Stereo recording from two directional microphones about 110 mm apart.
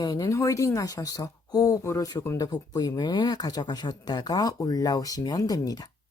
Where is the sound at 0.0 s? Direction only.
35° left (ahead or behind).